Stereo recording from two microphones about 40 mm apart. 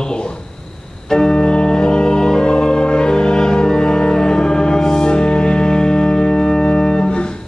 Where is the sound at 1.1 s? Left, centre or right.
Centre.